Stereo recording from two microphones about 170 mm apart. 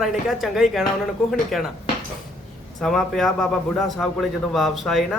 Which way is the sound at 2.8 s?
Centre (ahead or behind).